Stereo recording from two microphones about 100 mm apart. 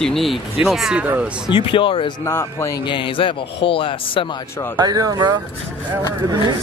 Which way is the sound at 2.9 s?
55° left (ahead or behind).